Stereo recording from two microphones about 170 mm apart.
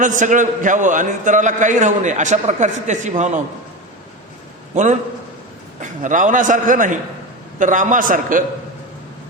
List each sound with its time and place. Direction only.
0.0 s a man's voice: 50° right (ahead or behind)
4.7 s a man's voice: 45° right (ahead or behind)